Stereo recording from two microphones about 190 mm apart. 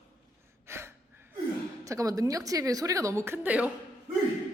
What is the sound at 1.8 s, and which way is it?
A woman's voice, 15° right (ahead or behind).